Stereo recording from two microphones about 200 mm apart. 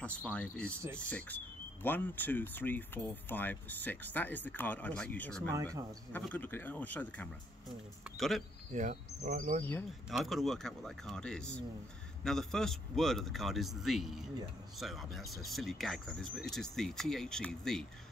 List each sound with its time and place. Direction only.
0.0 s speech: 5° left (ahead or behind)
5.5 s speech: 15° right (ahead or behind)
6.1 s speech: 10° left (ahead or behind)
8.7 s speech: 35° right (ahead or behind)
10.0 s speech: centre (ahead or behind)